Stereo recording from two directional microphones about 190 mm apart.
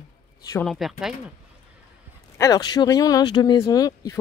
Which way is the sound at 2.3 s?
20° left (ahead or behind).